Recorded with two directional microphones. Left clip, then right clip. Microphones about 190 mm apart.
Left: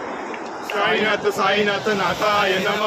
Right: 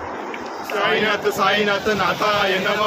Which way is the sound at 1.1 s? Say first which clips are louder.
Right 1 dB; 10° right (ahead or behind).